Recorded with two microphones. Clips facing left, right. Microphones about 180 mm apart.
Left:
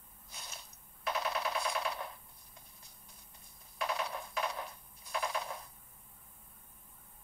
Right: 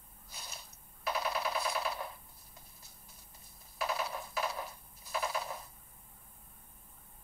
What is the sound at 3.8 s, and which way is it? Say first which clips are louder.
Coin: right 1 dB; 5° right (ahead or behind).